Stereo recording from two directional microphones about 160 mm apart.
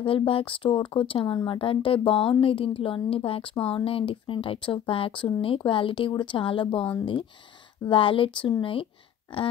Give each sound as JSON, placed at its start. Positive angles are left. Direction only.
{"t": 0.0, "sound": "a woman's voice", "side_deg": 35}